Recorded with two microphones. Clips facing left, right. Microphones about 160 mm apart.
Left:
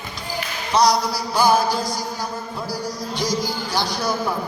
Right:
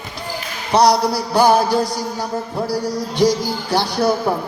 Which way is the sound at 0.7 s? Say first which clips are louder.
Right 4 dB; 65° right (ahead or behind).